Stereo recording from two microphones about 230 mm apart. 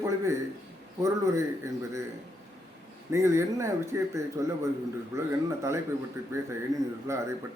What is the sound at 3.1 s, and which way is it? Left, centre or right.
A man's voice, centre.